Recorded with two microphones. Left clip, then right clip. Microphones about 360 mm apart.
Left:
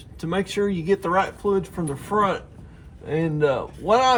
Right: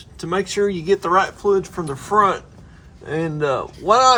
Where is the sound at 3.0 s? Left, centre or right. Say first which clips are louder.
Even; right.